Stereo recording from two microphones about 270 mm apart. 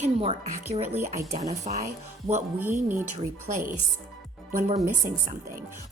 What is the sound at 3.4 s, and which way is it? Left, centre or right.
Speech, right.